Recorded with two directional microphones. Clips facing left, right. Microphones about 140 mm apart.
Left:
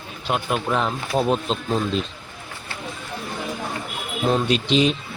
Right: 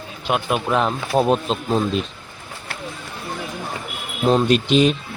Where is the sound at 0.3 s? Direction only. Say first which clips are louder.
Right 2 dB; 65° right (ahead or behind).